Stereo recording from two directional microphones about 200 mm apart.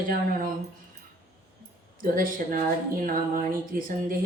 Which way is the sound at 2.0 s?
45° right (ahead or behind).